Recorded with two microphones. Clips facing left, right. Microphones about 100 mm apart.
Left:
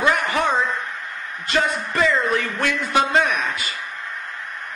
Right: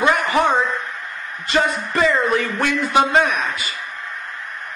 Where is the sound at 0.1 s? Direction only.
5° right (ahead or behind).